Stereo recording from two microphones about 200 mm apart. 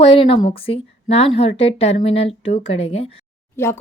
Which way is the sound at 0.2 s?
25° left (ahead or behind).